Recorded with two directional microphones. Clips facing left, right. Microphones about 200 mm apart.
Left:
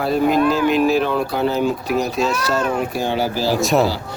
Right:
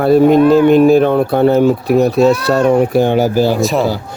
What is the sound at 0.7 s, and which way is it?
Speech, 55° right (ahead or behind).